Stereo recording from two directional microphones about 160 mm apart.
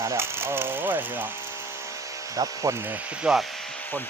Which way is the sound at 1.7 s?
20° right (ahead or behind).